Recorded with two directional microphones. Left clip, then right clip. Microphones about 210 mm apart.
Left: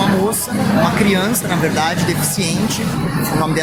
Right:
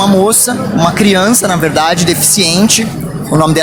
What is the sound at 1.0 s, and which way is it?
Speech, 45° right (ahead or behind).